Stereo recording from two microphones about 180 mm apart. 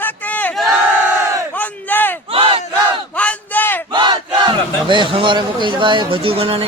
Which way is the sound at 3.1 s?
5° left (ahead or behind).